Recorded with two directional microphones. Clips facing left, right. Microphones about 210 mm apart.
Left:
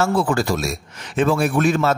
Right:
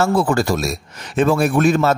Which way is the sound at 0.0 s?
40° right (ahead or behind).